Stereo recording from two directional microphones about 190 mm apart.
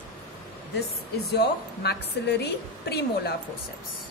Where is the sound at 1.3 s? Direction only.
60° left (ahead or behind).